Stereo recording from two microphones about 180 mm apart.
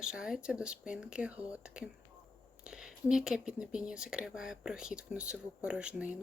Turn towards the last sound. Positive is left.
turn(degrees=-5)  # may be behind; listen again after turning